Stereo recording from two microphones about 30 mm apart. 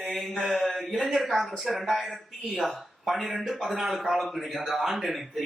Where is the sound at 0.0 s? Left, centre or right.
Centre.